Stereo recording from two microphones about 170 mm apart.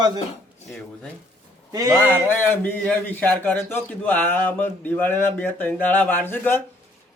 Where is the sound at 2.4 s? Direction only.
10° left (ahead or behind).